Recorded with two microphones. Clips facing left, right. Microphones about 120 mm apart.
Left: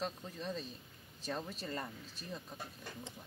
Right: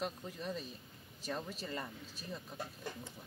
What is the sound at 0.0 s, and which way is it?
Speech, 5° right (ahead or behind).